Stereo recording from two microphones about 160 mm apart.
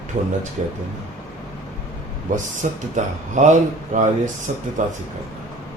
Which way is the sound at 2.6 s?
50° right (ahead or behind).